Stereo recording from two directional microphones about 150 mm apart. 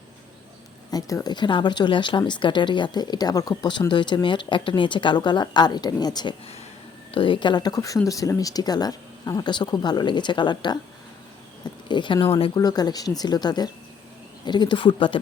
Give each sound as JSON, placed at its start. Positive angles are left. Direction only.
{"t": 0.9, "sound": "speech", "side_deg": 25}
{"t": 11.9, "sound": "speech", "side_deg": 30}